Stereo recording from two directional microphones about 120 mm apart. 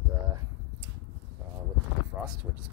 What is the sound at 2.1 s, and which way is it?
Speech, 15° right (ahead or behind).